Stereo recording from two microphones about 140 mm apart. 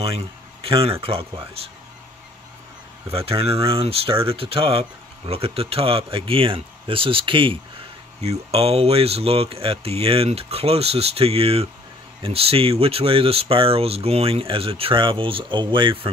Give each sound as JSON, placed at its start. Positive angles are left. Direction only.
{"t": 0.0, "sound": "speech", "side_deg": -40}
{"t": 3.1, "sound": "speech", "side_deg": -45}